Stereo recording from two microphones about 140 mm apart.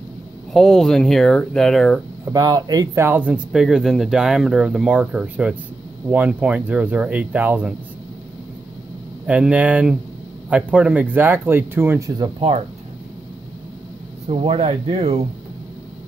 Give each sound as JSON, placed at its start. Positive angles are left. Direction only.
{"t": 0.5, "sound": "speech", "side_deg": 5}
{"t": 2.2, "sound": "speech", "side_deg": -25}
{"t": 9.2, "sound": "speech", "side_deg": -10}
{"t": 12.2, "sound": "speech", "side_deg": -40}
{"t": 14.2, "sound": "speech", "side_deg": -45}